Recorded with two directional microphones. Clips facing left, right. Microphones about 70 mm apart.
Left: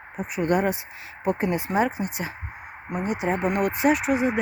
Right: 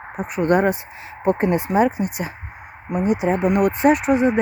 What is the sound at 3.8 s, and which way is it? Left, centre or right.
Speech, right.